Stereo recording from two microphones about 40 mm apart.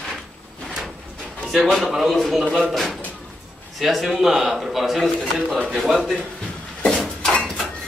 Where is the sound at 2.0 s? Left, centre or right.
Centre.